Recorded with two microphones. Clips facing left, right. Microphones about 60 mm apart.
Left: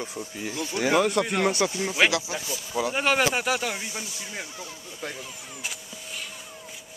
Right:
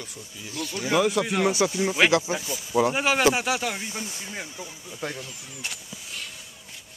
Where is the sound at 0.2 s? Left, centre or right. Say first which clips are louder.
Left 7 dB; left.